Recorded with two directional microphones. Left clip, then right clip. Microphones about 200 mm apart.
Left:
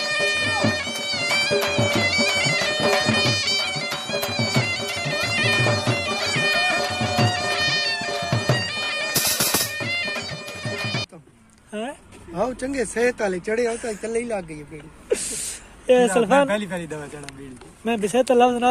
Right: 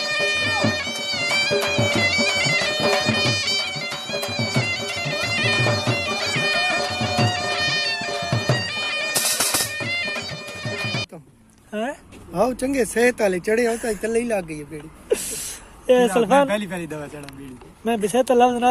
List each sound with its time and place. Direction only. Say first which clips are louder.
0.0 s bagpipes: even; centre (ahead or behind)
11.7 s a sound: right 3 dB; 10° right (ahead or behind)
12.4 s speech: right 4 dB; 35° right (ahead or behind)
15.9 s speech: even; centre (ahead or behind)